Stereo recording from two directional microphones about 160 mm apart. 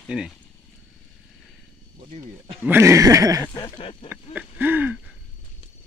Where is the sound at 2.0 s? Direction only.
35° right (ahead or behind).